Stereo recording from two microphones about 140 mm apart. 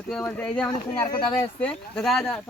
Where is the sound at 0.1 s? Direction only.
5° left (ahead or behind).